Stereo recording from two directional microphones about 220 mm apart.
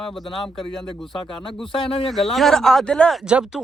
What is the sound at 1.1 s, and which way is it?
Speech, 20° left (ahead or behind).